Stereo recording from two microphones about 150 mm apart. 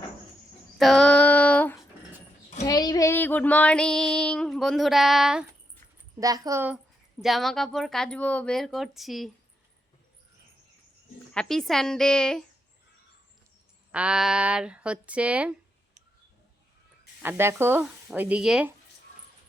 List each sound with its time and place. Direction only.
0.8 s female singing: centre (ahead or behind)
2.6 s child singing: 25° left (ahead or behind); by 5.5 s 5° right (ahead or behind)
6.1 s speech: 25° right (ahead or behind)
7.2 s speech: centre (ahead or behind)
11.3 s speech: centre (ahead or behind)
13.9 s speech: 5° right (ahead or behind)
17.2 s speech: 15° right (ahead or behind)